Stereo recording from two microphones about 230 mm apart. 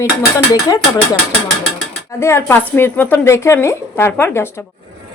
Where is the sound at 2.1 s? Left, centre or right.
Centre.